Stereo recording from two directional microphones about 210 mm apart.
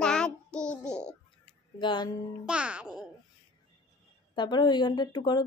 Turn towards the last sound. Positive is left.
turn(degrees=20)  # may be behind; listen again after turning